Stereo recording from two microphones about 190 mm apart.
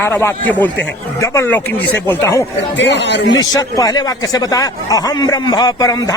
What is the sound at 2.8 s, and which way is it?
Speech, 65° left (ahead or behind).